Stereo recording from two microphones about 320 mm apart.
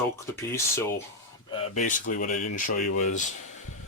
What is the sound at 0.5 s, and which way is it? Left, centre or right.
Speech, centre.